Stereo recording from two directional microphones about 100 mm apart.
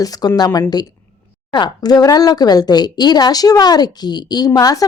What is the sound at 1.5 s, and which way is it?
A woman's voice, 40° left (ahead or behind).